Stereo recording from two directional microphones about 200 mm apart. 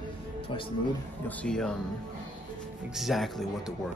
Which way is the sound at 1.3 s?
5° left (ahead or behind).